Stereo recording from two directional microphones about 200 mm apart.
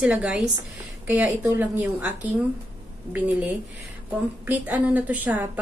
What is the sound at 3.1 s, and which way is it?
A woman's voice, 10° right (ahead or behind).